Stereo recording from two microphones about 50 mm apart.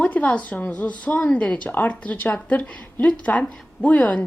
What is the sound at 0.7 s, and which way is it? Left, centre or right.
A woman's voice, left.